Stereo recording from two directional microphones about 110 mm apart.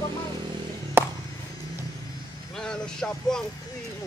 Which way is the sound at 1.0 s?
20° right (ahead or behind).